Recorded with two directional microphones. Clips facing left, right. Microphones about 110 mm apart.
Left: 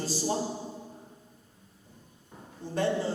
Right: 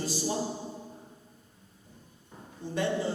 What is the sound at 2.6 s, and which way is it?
Speech, 35° left (ahead or behind).